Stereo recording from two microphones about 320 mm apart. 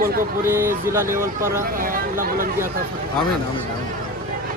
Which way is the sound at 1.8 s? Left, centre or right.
Right.